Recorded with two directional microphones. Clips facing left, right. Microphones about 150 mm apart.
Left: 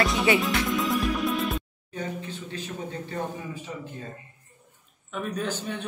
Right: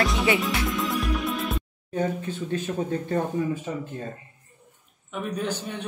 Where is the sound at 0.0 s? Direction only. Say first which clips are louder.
Even; centre (ahead or behind).